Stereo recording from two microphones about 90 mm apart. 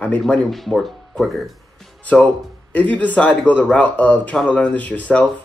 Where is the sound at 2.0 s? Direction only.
20° left (ahead or behind).